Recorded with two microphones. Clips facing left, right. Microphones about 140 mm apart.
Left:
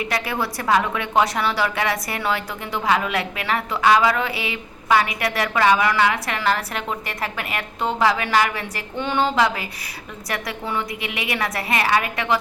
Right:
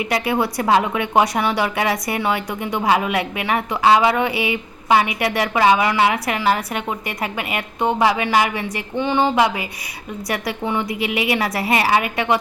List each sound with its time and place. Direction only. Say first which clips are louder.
0.0 s a woman's voice: right 5 dB; 25° right (ahead or behind)
6.4 s a woman's voice: right 2 dB; 10° right (ahead or behind)
10.3 s a woman's voice: right 3 dB; 25° right (ahead or behind)